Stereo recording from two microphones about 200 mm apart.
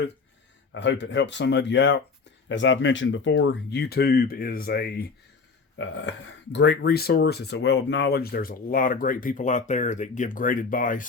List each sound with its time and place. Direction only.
0.7 s speech: 65° left (ahead or behind); by 5.0 s 50° left (ahead or behind)
5.7 s speech: 65° left (ahead or behind); by 11.0 s 40° left (ahead or behind)